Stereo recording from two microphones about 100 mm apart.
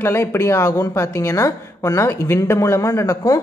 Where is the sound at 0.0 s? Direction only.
25° left (ahead or behind).